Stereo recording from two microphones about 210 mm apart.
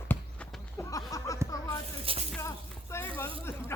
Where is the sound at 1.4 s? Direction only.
15° right (ahead or behind).